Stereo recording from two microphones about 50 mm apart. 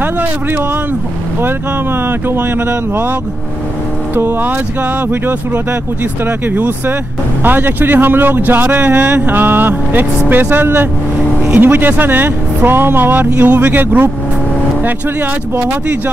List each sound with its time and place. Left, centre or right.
0.0 s a sound: right
2.0 s speech: right
4.1 s speech: right
6.2 s speech: right